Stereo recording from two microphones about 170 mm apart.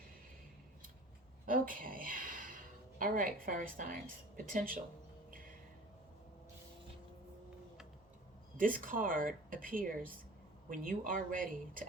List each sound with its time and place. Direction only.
1.5 s speech: 55° right (ahead or behind)
8.5 s speech: 55° right (ahead or behind)